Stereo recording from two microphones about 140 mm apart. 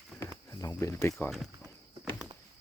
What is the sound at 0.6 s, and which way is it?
Speech, 20° left (ahead or behind).